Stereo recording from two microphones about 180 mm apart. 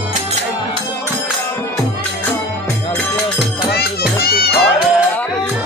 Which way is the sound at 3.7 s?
60° left (ahead or behind).